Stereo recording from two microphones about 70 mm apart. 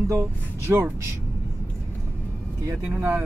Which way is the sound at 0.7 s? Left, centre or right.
Right.